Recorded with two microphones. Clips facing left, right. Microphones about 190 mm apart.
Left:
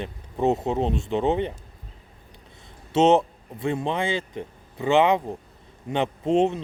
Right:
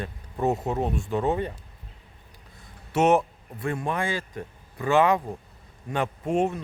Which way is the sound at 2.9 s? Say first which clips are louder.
Left 3 dB; 25° left (ahead or behind).